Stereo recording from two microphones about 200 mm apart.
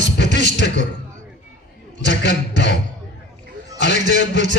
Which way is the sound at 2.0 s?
55° left (ahead or behind).